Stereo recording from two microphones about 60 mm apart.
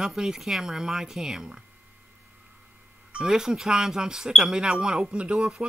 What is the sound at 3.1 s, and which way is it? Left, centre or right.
Speech, centre.